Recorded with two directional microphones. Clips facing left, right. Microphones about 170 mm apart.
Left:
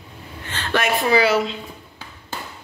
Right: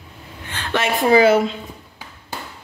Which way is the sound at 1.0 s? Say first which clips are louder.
Right 7 dB; 45° right (ahead or behind).